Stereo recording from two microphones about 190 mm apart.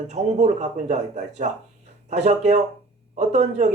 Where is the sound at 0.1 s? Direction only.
35° right (ahead or behind).